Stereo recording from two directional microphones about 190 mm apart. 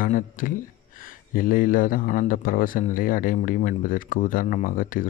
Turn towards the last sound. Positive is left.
turn(degrees=45)  # may be behind; listen again after turning